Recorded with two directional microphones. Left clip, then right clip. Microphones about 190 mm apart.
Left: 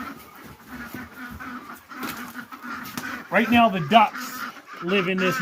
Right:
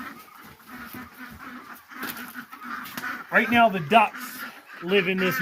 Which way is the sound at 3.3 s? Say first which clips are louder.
Even; 20° right (ahead or behind).